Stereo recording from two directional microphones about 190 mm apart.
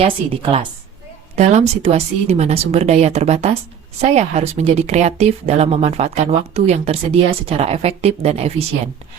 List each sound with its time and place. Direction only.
0.0 s speech: 30° right (ahead or behind)